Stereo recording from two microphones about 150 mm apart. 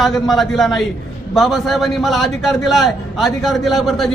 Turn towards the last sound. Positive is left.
turn(degrees=0)  # may be behind; listen again after turning